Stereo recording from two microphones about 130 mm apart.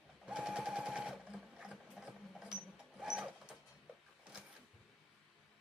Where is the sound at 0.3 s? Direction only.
5° right (ahead or behind).